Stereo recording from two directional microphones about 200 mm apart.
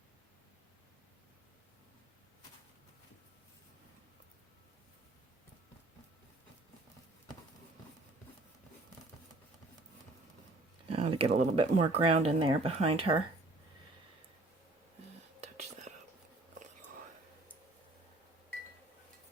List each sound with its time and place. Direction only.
10.8 s speech: 30° right (ahead or behind)